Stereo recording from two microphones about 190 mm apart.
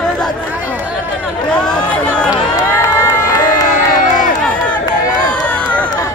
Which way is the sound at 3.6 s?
40° left (ahead or behind).